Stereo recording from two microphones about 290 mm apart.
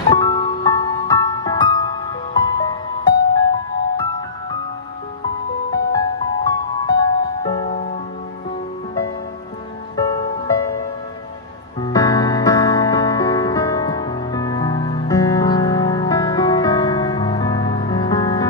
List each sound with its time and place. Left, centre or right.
0.1 s music: centre
5.7 s music: centre
9.9 s music: centre
11.8 s music: centre